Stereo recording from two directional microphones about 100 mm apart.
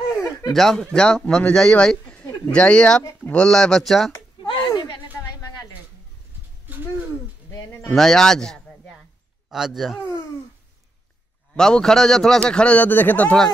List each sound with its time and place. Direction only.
0.5 s a man's voice: 5° left (ahead or behind)
4.4 s a sound: 45° left (ahead or behind)
7.9 s a man's voice: 5° left (ahead or behind)
11.5 s a man's voice: 5° left (ahead or behind)